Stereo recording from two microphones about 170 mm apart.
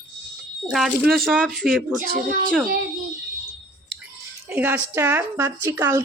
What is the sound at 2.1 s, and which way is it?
Speech, 55° right (ahead or behind).